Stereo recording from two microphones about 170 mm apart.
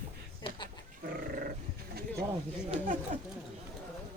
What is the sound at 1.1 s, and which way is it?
Goat, 60° right (ahead or behind).